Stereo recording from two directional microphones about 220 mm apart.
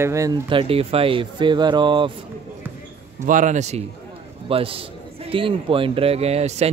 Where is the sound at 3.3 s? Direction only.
35° right (ahead or behind).